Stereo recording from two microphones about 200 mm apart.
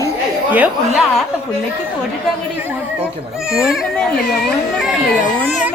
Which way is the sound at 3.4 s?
5° right (ahead or behind).